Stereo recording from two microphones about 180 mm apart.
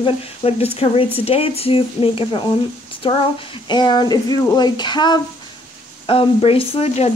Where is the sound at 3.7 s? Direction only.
25° left (ahead or behind).